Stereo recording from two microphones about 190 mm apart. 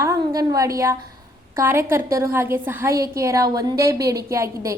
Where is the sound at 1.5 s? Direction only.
15° right (ahead or behind).